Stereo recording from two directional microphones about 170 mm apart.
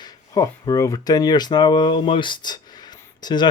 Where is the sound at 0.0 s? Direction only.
20° left (ahead or behind).